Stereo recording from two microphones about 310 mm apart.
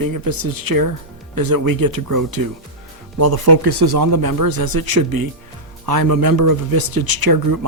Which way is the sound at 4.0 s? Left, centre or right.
Right.